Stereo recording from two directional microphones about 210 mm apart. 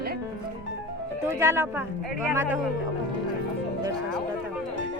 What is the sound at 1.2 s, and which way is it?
Speech, 10° right (ahead or behind).